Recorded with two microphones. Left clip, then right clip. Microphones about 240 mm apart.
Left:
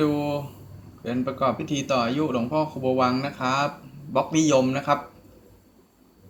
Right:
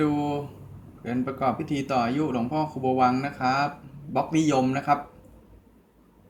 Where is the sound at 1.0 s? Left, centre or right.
Centre.